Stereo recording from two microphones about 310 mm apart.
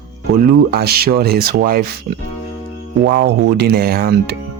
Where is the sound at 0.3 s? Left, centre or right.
Right.